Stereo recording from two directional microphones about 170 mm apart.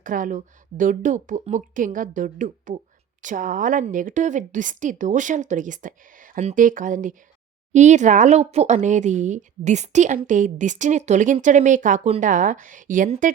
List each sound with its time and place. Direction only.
0.0 s speech: 50° right (ahead or behind)